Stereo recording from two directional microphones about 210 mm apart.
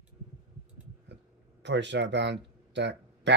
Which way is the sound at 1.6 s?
55° right (ahead or behind).